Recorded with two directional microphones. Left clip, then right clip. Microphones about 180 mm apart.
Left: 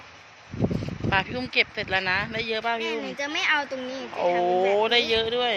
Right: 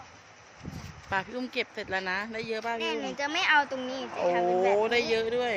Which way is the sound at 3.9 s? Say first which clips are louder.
Left 4 dB; 5° left (ahead or behind).